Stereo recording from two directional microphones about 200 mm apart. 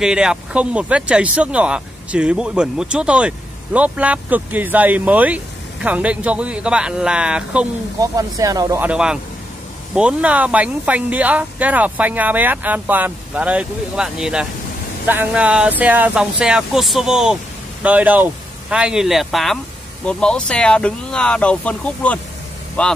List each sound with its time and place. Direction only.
0.0 s speech: 5° right (ahead or behind)
8.0 s speech: 15° right (ahead or behind)
8.8 s speech: 5° right (ahead or behind)